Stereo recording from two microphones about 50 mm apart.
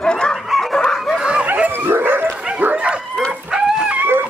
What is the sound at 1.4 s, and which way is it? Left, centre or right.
Dog, right.